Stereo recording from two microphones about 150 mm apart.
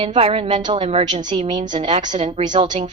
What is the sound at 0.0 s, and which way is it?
A woman's voice, 40° right (ahead or behind).